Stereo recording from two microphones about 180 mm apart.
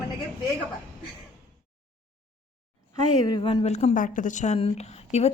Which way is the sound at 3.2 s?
25° left (ahead or behind).